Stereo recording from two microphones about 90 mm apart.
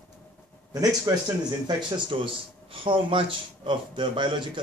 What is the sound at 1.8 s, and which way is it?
Speech, 70° right (ahead or behind).